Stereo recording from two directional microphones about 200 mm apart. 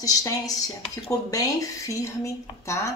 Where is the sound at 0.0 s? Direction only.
15° left (ahead or behind).